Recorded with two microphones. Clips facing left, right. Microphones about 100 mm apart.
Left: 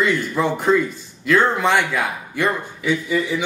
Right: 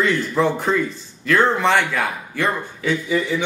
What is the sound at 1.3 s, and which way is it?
Speech, 15° left (ahead or behind).